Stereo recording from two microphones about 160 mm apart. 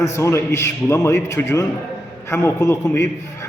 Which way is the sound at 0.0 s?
15° left (ahead or behind).